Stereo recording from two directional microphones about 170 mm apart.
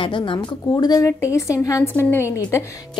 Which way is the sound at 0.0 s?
30° left (ahead or behind).